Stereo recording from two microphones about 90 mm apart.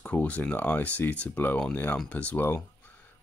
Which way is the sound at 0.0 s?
15° left (ahead or behind).